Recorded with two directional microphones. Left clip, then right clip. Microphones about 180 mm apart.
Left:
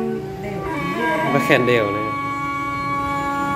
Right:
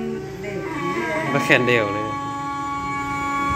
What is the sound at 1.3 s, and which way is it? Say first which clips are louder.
Speech: right 1 dB; 5° left (ahead or behind).